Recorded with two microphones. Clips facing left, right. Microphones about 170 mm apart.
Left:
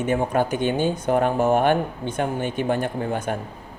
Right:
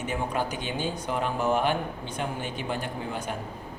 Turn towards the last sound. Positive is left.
turn(degrees=55)  # may be behind; listen again after turning